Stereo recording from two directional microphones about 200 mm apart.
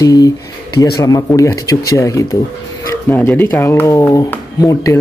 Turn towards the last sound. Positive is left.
turn(degrees=15)  # may be behind; listen again after turning